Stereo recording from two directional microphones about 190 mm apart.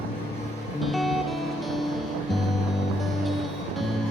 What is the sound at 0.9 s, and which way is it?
Music, centre (ahead or behind).